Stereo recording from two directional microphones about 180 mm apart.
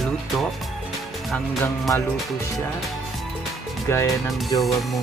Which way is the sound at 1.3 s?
5° left (ahead or behind).